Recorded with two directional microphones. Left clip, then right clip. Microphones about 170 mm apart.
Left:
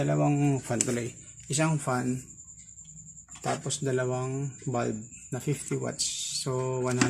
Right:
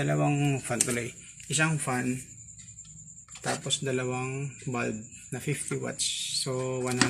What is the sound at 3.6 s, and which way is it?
Speech, 15° left (ahead or behind).